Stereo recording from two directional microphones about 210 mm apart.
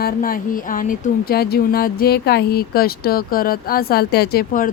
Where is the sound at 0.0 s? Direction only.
40° left (ahead or behind).